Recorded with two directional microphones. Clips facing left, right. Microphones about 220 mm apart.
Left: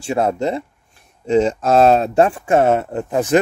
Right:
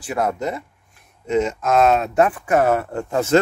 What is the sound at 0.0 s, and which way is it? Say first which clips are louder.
Speech: left 4 dB; 25° left (ahead or behind).